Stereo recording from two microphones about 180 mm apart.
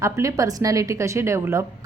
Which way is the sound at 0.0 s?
15° right (ahead or behind).